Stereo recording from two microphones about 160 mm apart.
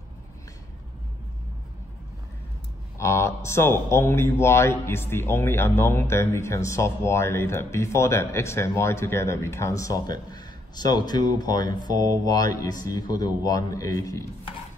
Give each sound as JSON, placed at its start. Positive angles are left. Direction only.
{"t": 3.0, "sound": "a man's voice", "side_deg": 15}